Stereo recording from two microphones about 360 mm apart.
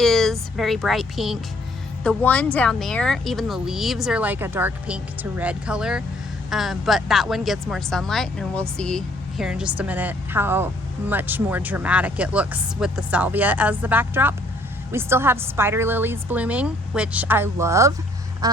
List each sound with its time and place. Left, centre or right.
0.0 s speech: centre
18.4 s quack: centre